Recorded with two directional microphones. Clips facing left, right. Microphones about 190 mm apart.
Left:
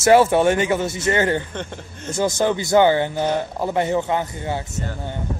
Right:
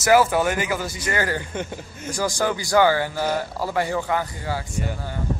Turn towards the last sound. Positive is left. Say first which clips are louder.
# left 2 dB
turn(degrees=25)  # may be behind; listen again after turning